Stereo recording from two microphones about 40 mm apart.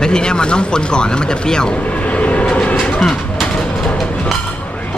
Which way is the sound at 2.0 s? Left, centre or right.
Left.